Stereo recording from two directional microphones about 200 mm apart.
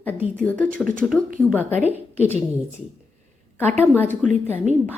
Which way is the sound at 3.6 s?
10° left (ahead or behind).